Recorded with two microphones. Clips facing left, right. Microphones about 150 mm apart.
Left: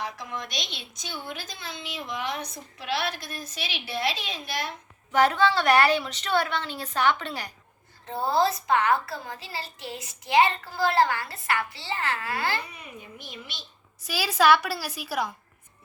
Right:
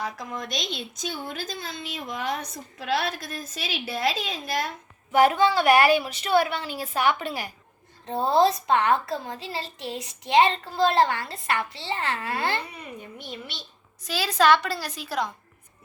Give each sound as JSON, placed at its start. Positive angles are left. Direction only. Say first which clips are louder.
{"t": 0.0, "sound": "a child's voice", "louder": "right 2 dB", "side_deg": -45}
{"t": 5.1, "sound": "a woman's voice", "louder": "right 2 dB", "side_deg": -15}
{"t": 14.0, "sound": "a woman's voice", "louder": "right 1 dB", "side_deg": 10}